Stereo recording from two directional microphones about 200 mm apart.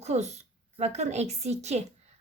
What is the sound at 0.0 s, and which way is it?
A woman's voice, 35° right (ahead or behind).